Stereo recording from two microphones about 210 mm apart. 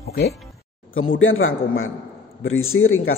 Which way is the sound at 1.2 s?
70° left (ahead or behind).